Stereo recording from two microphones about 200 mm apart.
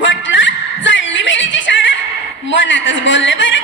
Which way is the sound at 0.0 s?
70° left (ahead or behind).